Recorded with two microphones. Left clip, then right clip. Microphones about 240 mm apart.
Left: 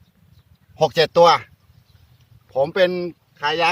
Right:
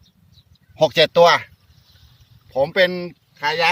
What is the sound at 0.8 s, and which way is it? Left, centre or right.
Speech, left.